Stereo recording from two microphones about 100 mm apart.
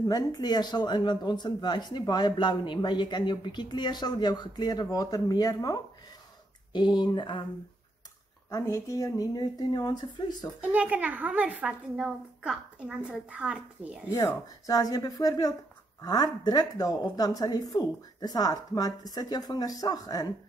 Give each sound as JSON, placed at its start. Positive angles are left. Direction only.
{"t": 0.0, "sound": "speech", "side_deg": 45}
{"t": 8.5, "sound": "speech", "side_deg": 35}
{"t": 10.6, "sound": "a woman's voice", "side_deg": -15}
{"t": 14.1, "sound": "speech", "side_deg": 40}